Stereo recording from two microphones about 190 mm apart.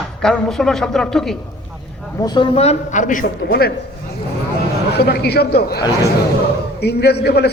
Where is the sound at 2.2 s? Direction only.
25° left (ahead or behind); by 3.2 s 40° left (ahead or behind).